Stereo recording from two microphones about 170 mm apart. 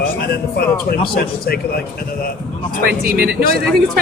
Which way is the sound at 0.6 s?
60° left (ahead or behind).